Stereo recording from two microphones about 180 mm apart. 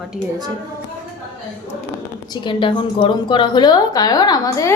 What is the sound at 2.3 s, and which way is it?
A woman's voice, 25° left (ahead or behind).